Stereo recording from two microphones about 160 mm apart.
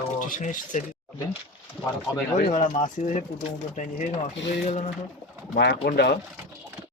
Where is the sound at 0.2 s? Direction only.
55° left (ahead or behind).